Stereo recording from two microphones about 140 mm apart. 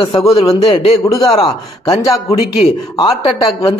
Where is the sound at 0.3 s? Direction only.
45° left (ahead or behind).